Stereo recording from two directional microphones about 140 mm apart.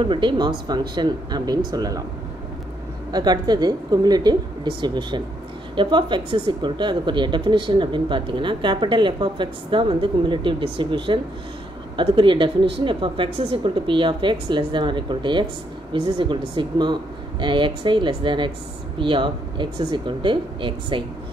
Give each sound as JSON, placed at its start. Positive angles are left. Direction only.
{"t": 0.0, "sound": "a woman's voice", "side_deg": -35}
{"t": 3.1, "sound": "a woman's voice", "side_deg": -30}